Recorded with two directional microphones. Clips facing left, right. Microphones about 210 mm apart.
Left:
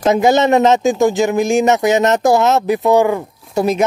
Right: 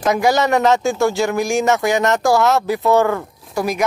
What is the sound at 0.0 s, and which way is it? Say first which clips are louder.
Speech: left 4 dB; 25° left (ahead or behind).